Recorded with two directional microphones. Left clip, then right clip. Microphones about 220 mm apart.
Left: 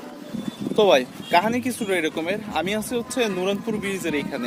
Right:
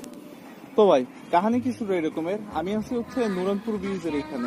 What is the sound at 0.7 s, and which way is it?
Speech, 10° left (ahead or behind).